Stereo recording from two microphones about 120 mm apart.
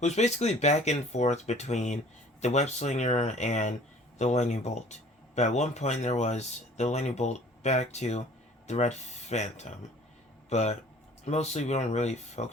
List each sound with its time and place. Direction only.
0.0 s speech: 70° left (ahead or behind)